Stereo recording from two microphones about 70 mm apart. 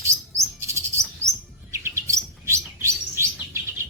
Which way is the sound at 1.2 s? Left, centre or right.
Right.